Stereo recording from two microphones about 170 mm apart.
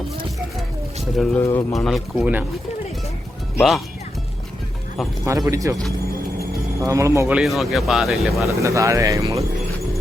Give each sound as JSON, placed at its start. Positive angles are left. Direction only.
{"t": 1.1, "sound": "speech", "side_deg": 0}
{"t": 1.4, "sound": "speech", "side_deg": 15}
{"t": 1.7, "sound": "speech", "side_deg": 0}
{"t": 3.6, "sound": "speech", "side_deg": 0}
{"t": 5.2, "sound": "speech", "side_deg": -20}
{"t": 6.8, "sound": "speech", "side_deg": -20}
{"t": 7.3, "sound": "speech", "side_deg": 0}
{"t": 8.4, "sound": "speech", "side_deg": -15}